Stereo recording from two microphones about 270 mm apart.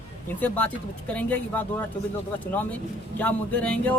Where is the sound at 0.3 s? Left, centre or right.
Centre.